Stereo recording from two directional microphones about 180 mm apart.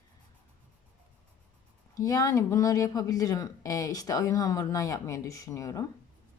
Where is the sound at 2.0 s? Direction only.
20° left (ahead or behind).